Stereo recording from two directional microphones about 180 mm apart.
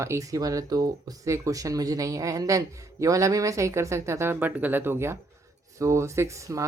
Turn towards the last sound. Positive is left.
turn(degrees=-15)  # may be behind; listen again after turning